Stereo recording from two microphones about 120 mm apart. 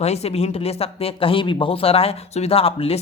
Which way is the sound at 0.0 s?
60° left (ahead or behind).